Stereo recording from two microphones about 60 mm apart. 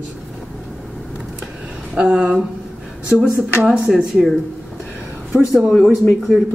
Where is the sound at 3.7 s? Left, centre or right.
Centre.